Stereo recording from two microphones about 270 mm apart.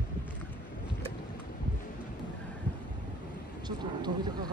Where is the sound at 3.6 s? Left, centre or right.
Centre.